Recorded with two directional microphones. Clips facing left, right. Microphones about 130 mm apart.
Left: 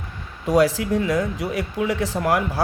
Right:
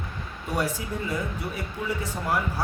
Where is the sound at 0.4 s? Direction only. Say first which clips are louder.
Left 11 dB; 90° left.